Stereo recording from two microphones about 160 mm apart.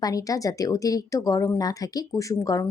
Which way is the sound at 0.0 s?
20° left (ahead or behind).